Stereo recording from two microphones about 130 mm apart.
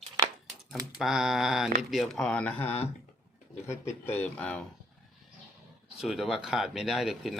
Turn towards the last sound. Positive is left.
turn(degrees=-5)  # may be behind; listen again after turning